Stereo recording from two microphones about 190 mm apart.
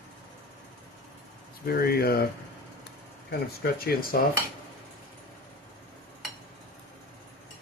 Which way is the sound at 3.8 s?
50° left (ahead or behind).